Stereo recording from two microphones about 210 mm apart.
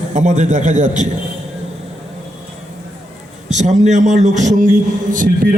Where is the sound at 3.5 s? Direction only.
35° right (ahead or behind).